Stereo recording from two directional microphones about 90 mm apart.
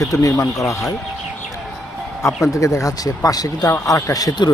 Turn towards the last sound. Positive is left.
turn(degrees=50)  # may be behind; listen again after turning